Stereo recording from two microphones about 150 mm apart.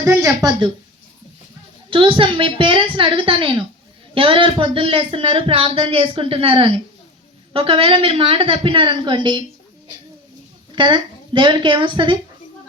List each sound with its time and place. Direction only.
0.0 s a woman's voice: 20° right (ahead or behind)
1.9 s speech: 35° right (ahead or behind)
10.8 s speech: 30° right (ahead or behind)